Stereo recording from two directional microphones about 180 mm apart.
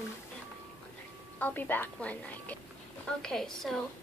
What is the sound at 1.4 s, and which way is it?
A woman's voice, 10° left (ahead or behind).